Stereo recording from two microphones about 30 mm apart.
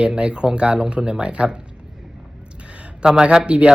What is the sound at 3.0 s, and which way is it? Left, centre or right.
Speech, right.